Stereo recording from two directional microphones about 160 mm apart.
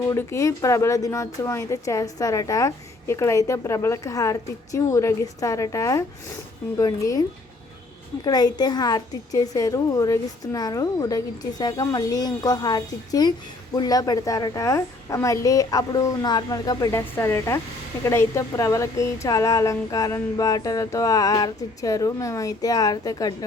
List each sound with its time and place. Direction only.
0.0 s speech: 15° left (ahead or behind)